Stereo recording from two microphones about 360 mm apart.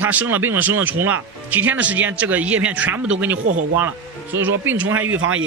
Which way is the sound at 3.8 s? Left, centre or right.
Centre.